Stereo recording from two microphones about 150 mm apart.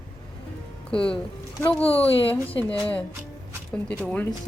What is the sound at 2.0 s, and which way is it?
Speech, 40° left (ahead or behind).